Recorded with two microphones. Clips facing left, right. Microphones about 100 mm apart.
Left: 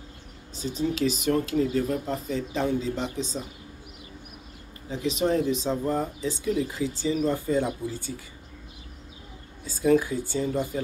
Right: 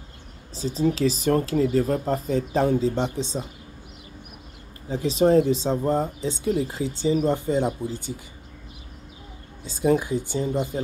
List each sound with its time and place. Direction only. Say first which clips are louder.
0.6 s speech: right 4 dB; 35° right (ahead or behind)
4.8 s speech: right 6 dB; 35° right (ahead or behind)
9.7 s speech: even; 20° right (ahead or behind)